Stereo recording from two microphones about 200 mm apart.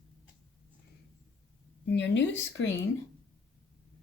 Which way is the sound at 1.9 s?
60° left (ahead or behind).